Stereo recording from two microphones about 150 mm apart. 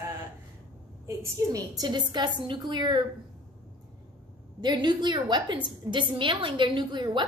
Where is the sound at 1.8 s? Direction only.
30° right (ahead or behind).